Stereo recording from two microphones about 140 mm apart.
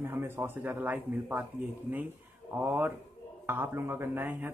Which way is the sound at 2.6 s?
15° right (ahead or behind).